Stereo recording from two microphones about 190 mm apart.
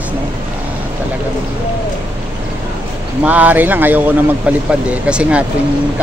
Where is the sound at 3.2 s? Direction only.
5° right (ahead or behind).